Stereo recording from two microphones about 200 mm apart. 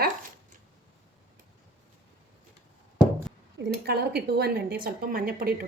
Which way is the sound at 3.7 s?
50° right (ahead or behind).